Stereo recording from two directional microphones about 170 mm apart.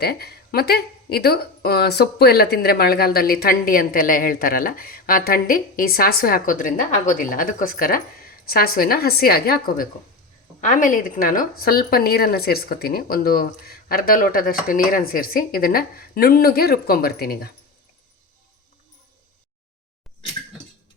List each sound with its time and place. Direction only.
0.0 s speech: 70° left (ahead or behind)